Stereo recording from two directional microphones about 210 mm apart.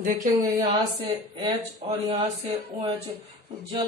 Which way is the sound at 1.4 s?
20° right (ahead or behind).